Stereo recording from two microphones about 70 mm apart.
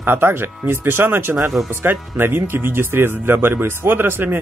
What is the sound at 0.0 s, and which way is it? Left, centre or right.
Speech, right.